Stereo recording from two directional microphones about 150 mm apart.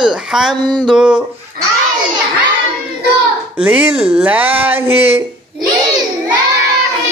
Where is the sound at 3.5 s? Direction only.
10° right (ahead or behind).